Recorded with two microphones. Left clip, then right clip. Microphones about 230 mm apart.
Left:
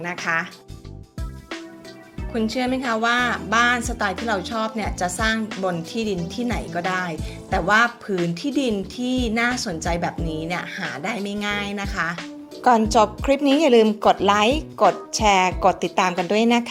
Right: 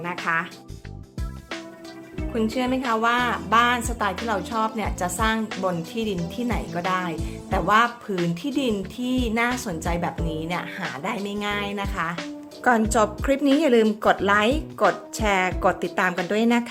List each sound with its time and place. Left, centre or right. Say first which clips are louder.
0.0 s speech: left 1 dB; centre
2.3 s a woman's voice: left 1 dB; centre